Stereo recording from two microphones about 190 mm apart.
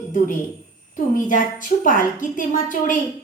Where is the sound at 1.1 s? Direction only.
45° left (ahead or behind).